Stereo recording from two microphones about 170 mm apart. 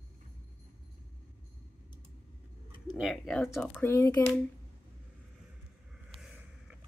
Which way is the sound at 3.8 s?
20° left (ahead or behind).